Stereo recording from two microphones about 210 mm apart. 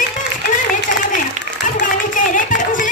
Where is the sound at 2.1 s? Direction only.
40° left (ahead or behind).